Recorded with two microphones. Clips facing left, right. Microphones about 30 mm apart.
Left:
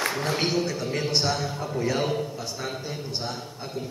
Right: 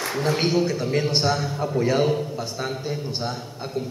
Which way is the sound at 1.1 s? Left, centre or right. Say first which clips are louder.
Right 1 dB; right.